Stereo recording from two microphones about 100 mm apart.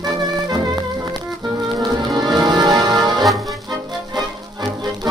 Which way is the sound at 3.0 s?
Centre (ahead or behind).